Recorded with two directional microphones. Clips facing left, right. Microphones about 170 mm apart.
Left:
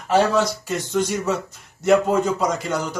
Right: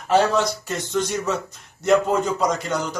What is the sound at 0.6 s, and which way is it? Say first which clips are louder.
A man's voice: left 2 dB; 5° left (ahead or behind).